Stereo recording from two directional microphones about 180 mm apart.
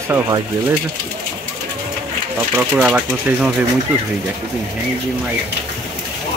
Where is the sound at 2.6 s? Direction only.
10° right (ahead or behind).